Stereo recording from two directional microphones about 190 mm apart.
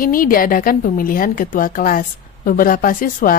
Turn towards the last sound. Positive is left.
turn(degrees=45)  # may be behind; listen again after turning